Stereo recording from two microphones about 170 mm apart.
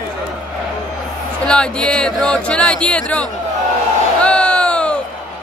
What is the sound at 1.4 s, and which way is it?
Speech, 5° left (ahead or behind).